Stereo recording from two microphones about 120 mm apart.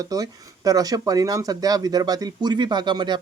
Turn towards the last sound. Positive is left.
turn(degrees=-40)  # may be behind; listen again after turning